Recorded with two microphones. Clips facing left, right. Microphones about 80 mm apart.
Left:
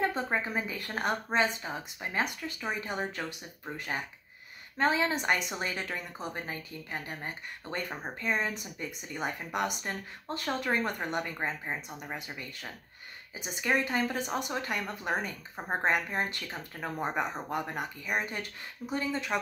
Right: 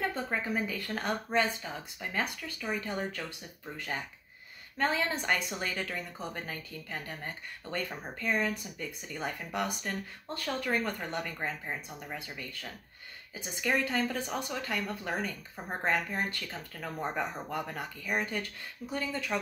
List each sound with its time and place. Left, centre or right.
0.0 s a woman's voice: left